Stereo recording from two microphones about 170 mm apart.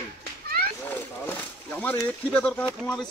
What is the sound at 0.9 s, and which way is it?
Speech, 10° left (ahead or behind).